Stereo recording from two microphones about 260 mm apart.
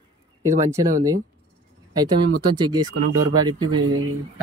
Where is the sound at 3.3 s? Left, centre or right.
Centre.